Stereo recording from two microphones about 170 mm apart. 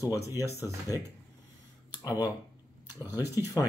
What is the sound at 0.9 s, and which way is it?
Speech, 20° left (ahead or behind).